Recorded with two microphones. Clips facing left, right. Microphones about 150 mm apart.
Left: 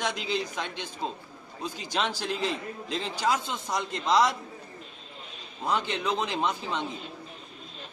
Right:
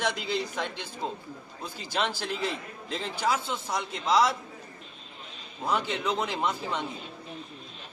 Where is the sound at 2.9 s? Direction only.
5° right (ahead or behind).